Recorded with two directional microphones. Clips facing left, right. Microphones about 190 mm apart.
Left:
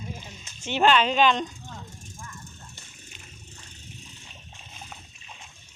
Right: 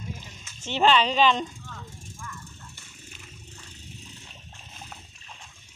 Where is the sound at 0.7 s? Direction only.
Centre (ahead or behind).